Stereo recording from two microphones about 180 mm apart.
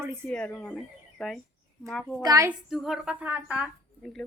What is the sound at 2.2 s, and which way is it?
Speech, 20° right (ahead or behind).